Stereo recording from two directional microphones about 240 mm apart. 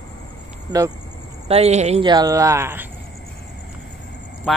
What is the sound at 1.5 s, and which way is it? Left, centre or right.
Speech, right.